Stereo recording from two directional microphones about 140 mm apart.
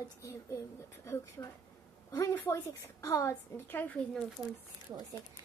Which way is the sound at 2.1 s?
20° left (ahead or behind).